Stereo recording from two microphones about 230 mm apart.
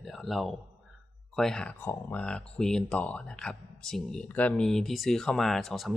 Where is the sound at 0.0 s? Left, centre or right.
Centre.